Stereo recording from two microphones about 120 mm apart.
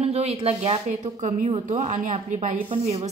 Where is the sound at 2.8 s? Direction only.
60° right (ahead or behind).